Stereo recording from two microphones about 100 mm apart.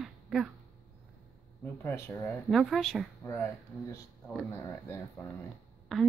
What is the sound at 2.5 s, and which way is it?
Speech, centre (ahead or behind).